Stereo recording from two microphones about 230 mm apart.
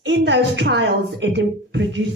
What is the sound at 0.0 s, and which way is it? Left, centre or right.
A woman's voice, right.